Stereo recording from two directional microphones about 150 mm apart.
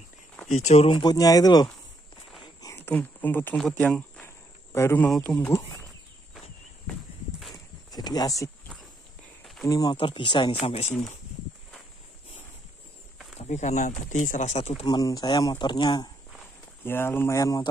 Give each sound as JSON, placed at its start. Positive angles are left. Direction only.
{"t": 0.5, "sound": "speech", "side_deg": 45}
{"t": 3.8, "sound": "cricket", "side_deg": 5}
{"t": 4.7, "sound": "speech", "side_deg": 15}
{"t": 7.5, "sound": "a sound", "side_deg": 25}
{"t": 9.7, "sound": "speech", "side_deg": 25}
{"t": 13.4, "sound": "speech", "side_deg": 50}
{"t": 14.9, "sound": "speech", "side_deg": 25}
{"t": 16.8, "sound": "speech", "side_deg": 15}